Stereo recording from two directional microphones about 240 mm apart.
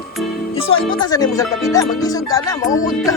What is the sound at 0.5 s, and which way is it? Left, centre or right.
Speech, left.